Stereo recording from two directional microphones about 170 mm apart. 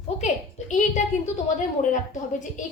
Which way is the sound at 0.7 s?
45° left (ahead or behind).